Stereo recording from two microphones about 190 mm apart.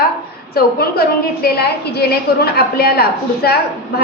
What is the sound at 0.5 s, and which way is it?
A woman's voice, 55° left (ahead or behind).